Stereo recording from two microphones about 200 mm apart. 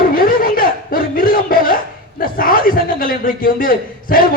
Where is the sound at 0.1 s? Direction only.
45° left (ahead or behind).